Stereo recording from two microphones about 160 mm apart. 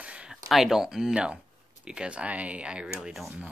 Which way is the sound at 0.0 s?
5° right (ahead or behind).